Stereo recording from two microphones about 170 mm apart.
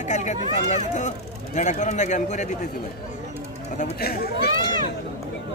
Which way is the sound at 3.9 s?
65° left (ahead or behind).